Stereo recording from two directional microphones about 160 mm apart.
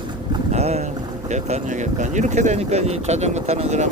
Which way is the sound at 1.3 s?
45° right (ahead or behind).